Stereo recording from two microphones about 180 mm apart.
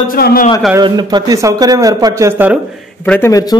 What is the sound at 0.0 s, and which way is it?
Speech, 55° left (ahead or behind).